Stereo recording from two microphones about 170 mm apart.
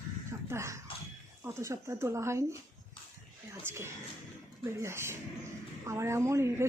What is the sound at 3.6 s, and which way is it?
A woman's voice, 15° right (ahead or behind).